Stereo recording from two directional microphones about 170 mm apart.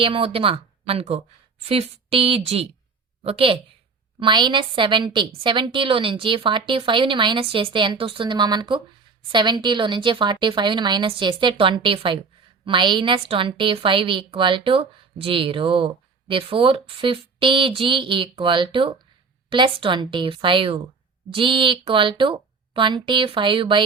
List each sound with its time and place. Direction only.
0.0 s a woman's voice: 30° right (ahead or behind)